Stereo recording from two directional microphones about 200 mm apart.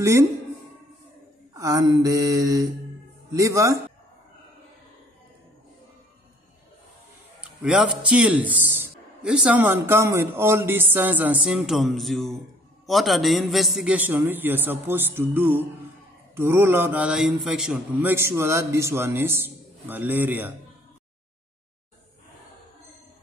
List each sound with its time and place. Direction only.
0.0 s a man's voice: 15° right (ahead or behind)
1.5 s a man's voice: 15° right (ahead or behind)
7.3 s a man's voice: 5° right (ahead or behind)